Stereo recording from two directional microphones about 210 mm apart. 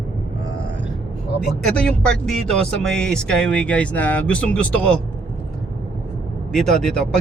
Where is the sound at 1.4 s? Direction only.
5° left (ahead or behind).